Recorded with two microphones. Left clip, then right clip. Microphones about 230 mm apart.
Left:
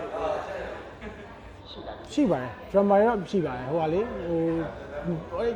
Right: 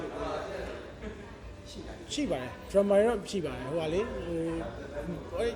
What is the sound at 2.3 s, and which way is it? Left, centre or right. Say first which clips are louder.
Speech: right 1 dB; centre.